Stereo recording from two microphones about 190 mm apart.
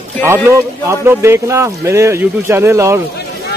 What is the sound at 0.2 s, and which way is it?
A man's voice, 15° right (ahead or behind).